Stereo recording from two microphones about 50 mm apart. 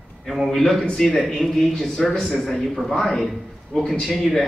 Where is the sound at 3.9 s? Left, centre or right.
Centre.